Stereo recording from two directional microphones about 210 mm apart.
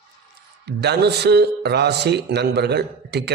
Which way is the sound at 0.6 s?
50° right (ahead or behind).